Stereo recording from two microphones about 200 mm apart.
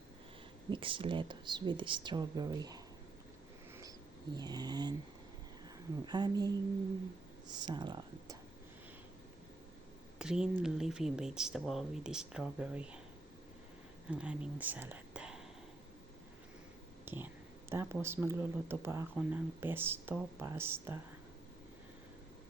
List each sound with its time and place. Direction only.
0.7 s speech: 25° right (ahead or behind)
4.4 s speech: 20° right (ahead or behind)
6.1 s speech: 20° right (ahead or behind)
10.2 s speech: 5° right (ahead or behind)
14.1 s speech: 5° right (ahead or behind)
17.1 s a sound: 10° right (ahead or behind)
17.7 s speech: 10° right (ahead or behind)